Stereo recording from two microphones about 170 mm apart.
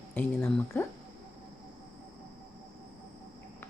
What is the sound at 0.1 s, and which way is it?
Speech, 10° left (ahead or behind).